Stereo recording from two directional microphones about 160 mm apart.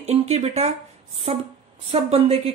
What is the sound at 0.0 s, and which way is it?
Speech, 40° right (ahead or behind).